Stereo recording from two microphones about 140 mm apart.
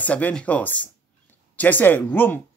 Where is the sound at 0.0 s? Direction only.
10° left (ahead or behind).